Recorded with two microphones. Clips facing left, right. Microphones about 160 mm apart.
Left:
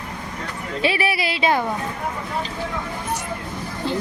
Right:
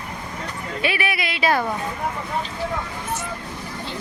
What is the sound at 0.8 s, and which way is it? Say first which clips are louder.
Speech: left 3 dB; 30° left (ahead or behind).